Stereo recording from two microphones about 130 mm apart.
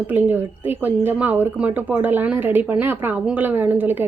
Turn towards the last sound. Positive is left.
turn(degrees=-15)  # may be behind; listen again after turning